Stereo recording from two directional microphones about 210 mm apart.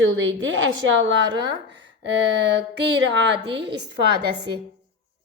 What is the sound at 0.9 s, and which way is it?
Speech, 60° right (ahead or behind).